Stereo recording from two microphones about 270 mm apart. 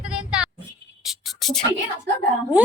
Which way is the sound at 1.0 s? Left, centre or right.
Centre.